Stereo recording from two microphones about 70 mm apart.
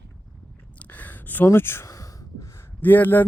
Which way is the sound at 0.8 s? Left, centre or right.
Left.